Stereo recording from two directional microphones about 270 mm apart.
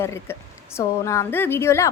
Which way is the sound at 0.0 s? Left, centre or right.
Centre.